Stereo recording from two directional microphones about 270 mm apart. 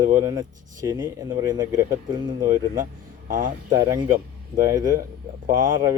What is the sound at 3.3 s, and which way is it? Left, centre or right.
Speech, right.